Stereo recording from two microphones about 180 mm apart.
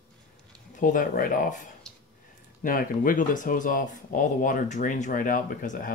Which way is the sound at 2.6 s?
50° left (ahead or behind).